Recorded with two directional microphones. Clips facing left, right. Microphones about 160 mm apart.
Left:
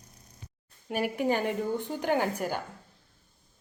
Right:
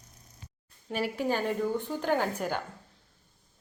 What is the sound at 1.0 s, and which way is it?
A woman's voice, 15° left (ahead or behind).